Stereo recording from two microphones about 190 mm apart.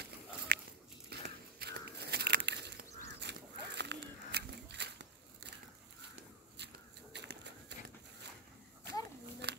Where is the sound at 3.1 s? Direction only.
65° right (ahead or behind).